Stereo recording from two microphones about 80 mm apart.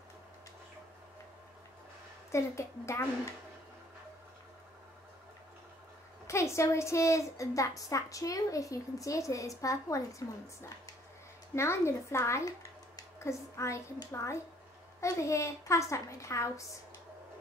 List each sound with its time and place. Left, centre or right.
2.3 s a woman's voice: left
6.2 s a woman's voice: left